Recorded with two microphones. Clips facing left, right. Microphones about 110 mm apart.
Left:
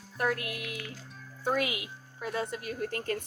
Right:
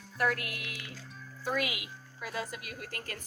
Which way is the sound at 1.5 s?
30° left (ahead or behind).